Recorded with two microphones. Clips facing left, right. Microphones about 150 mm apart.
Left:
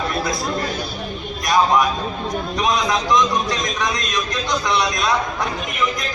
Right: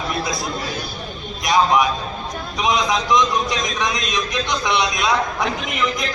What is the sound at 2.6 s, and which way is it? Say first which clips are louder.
A man's voice: right 1 dB; 15° right (ahead or behind).